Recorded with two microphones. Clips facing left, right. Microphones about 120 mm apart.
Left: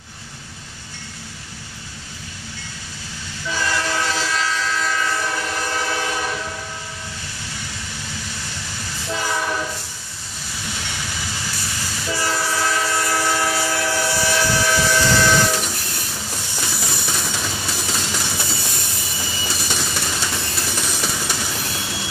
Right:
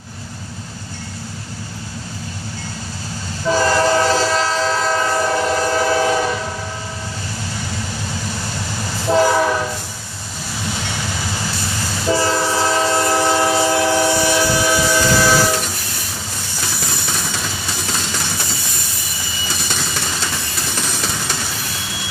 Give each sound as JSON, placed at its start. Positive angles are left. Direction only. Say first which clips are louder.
{"t": 3.4, "sound": "train", "louder": "right 9 dB", "side_deg": -40}
{"t": 9.0, "sound": "train", "louder": "right 12 dB", "side_deg": -40}
{"t": 12.1, "sound": "train", "louder": "right 6 dB", "side_deg": -25}
{"t": 16.6, "sound": "music", "louder": "right 2 dB", "side_deg": 5}
{"t": 20.8, "sound": "a sound", "louder": "right 1 dB", "side_deg": 5}